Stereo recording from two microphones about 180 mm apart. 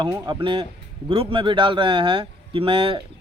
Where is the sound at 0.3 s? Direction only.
25° right (ahead or behind).